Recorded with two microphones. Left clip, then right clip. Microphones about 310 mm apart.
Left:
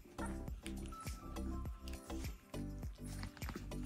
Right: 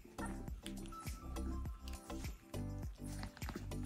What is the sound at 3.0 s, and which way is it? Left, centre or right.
Music, centre.